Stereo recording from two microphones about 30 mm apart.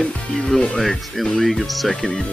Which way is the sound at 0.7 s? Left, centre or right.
Centre.